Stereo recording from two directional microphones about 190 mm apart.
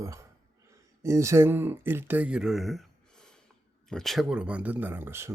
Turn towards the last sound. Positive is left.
turn(degrees=-15)  # may be behind; listen again after turning